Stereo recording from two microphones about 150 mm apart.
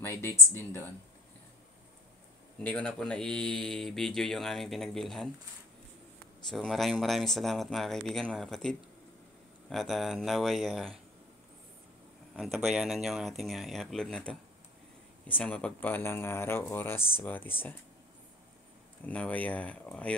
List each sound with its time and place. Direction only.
0.0 s speech: 20° left (ahead or behind)
2.6 s speech: 10° left (ahead or behind)
6.5 s speech: centre (ahead or behind)
12.4 s speech: centre (ahead or behind); by 17.7 s 15° left (ahead or behind)
19.0 s speech: 10° left (ahead or behind)